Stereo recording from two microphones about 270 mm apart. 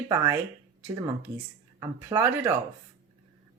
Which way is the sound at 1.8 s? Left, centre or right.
Centre.